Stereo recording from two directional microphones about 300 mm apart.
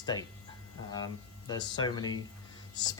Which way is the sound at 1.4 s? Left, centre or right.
Centre.